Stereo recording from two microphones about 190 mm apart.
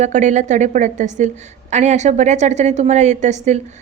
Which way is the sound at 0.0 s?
40° right (ahead or behind).